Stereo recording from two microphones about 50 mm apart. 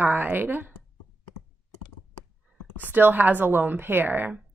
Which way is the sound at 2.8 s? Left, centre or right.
Right.